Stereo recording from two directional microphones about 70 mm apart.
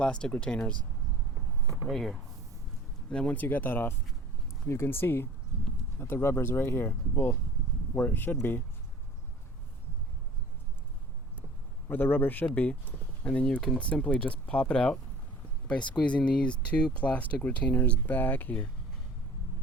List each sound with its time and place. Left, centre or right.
0.0 s speech: centre
1.9 s speech: centre
3.1 s speech: centre; by 8.6 s left
11.9 s speech: left